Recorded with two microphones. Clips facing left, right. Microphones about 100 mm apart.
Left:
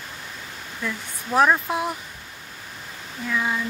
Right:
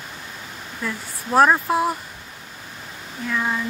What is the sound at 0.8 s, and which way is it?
Speech, 10° right (ahead or behind).